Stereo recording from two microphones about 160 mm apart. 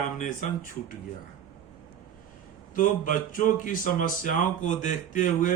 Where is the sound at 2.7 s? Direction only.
55° left (ahead or behind).